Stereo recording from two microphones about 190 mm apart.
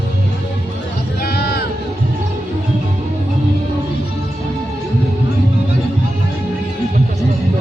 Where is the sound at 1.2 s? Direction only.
55° left (ahead or behind).